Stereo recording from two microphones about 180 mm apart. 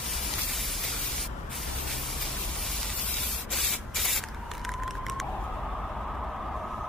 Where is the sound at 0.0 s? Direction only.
Centre (ahead or behind).